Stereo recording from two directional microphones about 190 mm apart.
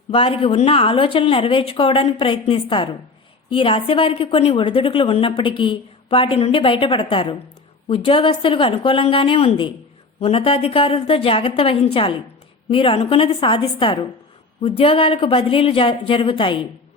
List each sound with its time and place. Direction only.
0.1 s a woman's voice: 30° left (ahead or behind)